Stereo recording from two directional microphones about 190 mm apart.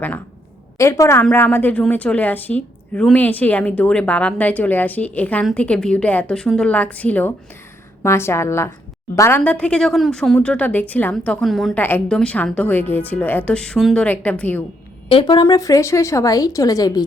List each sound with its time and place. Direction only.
0.8 s speech: 15° left (ahead or behind)
15.1 s speech: 25° left (ahead or behind)